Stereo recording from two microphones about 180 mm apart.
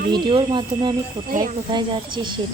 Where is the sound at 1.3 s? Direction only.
45° right (ahead or behind).